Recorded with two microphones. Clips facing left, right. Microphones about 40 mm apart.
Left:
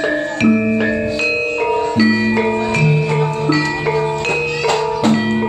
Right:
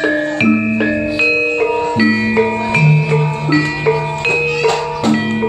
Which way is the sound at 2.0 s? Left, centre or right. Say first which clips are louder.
Right 2 dB; centre.